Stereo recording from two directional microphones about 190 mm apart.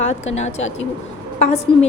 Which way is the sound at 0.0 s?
35° left (ahead or behind).